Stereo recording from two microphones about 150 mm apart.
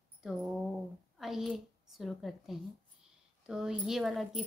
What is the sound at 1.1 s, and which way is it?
A woman's voice, centre (ahead or behind).